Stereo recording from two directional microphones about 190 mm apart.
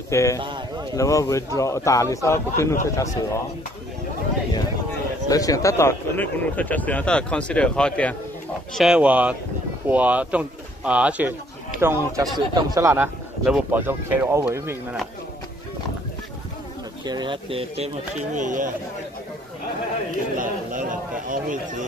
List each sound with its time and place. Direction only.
0.1 s speech: 15° left (ahead or behind)
5.3 s speech: 20° left (ahead or behind)
8.7 s a man's voice: 5° right (ahead or behind)
17.0 s speech: 25° right (ahead or behind); by 18.7 s 40° right (ahead or behind)
20.3 s a man's voice: 45° right (ahead or behind)